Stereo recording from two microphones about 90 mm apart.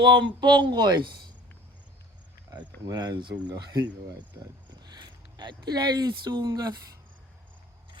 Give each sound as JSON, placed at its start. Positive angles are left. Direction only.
{"t": 0.0, "sound": "speech", "side_deg": -60}
{"t": 2.8, "sound": "speech", "side_deg": -45}
{"t": 4.8, "sound": "speech", "side_deg": -55}